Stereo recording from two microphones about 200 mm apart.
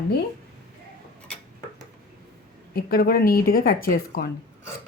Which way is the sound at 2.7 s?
50° left (ahead or behind).